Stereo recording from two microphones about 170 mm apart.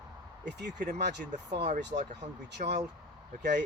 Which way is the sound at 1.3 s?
45° right (ahead or behind).